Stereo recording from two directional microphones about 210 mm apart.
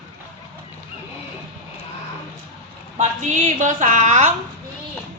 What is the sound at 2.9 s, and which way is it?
A woman's voice, 35° right (ahead or behind).